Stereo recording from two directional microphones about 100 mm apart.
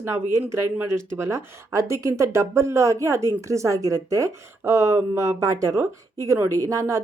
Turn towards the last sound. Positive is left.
turn(degrees=-30)  # may be behind; listen again after turning